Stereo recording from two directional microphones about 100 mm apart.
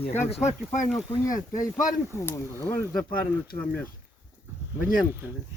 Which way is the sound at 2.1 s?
25° left (ahead or behind).